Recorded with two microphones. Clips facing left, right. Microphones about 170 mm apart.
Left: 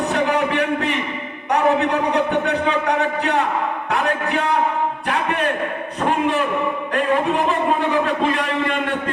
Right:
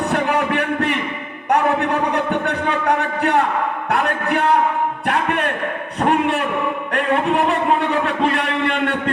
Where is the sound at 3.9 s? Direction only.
55° right (ahead or behind).